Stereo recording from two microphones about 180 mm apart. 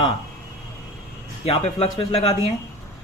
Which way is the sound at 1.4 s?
30° left (ahead or behind).